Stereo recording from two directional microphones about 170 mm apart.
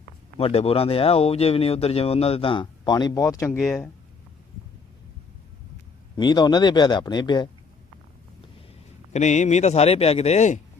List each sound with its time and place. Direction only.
0.3 s speech: 35° left (ahead or behind); by 3.9 s 15° left (ahead or behind)
6.1 s a man's voice: 25° left (ahead or behind)
9.1 s speech: 40° left (ahead or behind)